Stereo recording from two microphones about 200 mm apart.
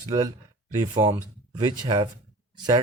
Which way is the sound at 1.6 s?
25° right (ahead or behind).